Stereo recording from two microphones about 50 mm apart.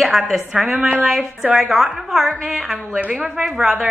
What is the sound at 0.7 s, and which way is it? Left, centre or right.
Speech, right.